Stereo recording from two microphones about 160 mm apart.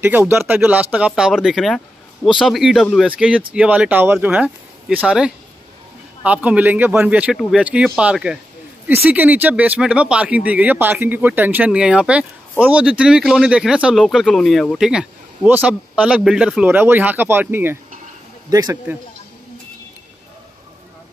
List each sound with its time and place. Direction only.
0.0 s a man's voice: 15° right (ahead or behind)